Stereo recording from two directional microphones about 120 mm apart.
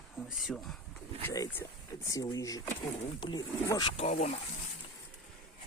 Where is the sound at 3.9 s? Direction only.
65° left (ahead or behind).